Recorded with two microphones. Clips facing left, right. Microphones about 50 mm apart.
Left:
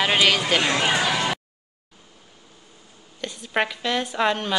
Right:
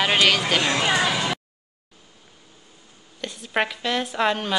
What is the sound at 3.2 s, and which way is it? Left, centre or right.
A woman's voice, centre.